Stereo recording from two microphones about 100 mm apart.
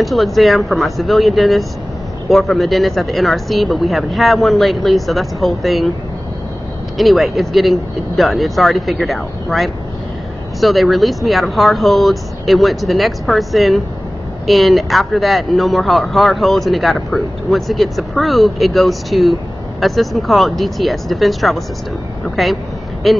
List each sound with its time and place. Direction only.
0.0 s speech: centre (ahead or behind)
7.0 s speech: centre (ahead or behind)